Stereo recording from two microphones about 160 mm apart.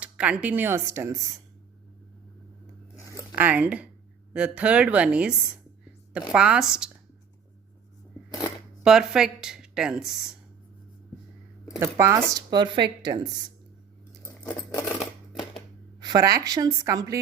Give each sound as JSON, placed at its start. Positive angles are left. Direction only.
{"t": 0.0, "sound": "speech", "side_deg": -10}
{"t": 2.9, "sound": "a sound", "side_deg": 20}
{"t": 3.3, "sound": "speech", "side_deg": -10}
{"t": 6.3, "sound": "speech", "side_deg": -5}
{"t": 8.3, "sound": "speech", "side_deg": 20}
{"t": 8.8, "sound": "speech", "side_deg": -5}
{"t": 11.8, "sound": "a woman's voice", "side_deg": -20}
{"t": 14.7, "sound": "coin", "side_deg": 15}
{"t": 14.9, "sound": "a sound", "side_deg": 30}
{"t": 16.0, "sound": "a woman's voice", "side_deg": -25}